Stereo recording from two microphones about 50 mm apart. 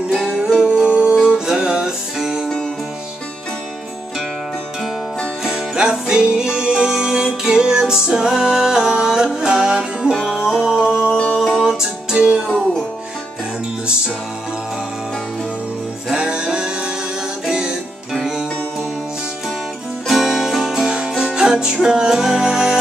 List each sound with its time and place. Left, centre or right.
0.1 s music: centre
0.8 s music: centre
5.4 s music: centre
11.3 s music: centre
11.6 s music: centre
12.4 s music: centre
16.1 s music: centre
20.1 s music: centre